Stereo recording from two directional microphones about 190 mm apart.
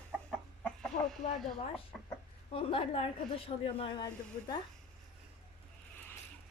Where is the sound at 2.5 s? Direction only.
30° left (ahead or behind).